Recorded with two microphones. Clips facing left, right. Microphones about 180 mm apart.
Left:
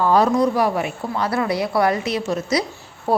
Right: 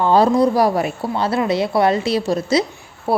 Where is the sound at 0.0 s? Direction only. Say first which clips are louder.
Right 2 dB; 30° right (ahead or behind).